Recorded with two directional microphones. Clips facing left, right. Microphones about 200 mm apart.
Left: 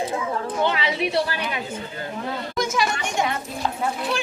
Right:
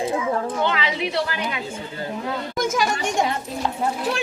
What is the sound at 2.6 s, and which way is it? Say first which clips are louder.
Speech: right 1 dB; 45° right (ahead or behind).